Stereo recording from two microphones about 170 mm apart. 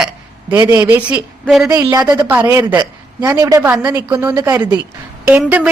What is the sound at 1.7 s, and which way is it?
A woman's voice, 20° right (ahead or behind).